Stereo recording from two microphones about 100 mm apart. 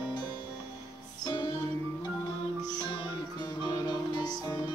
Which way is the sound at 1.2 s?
45° left (ahead or behind).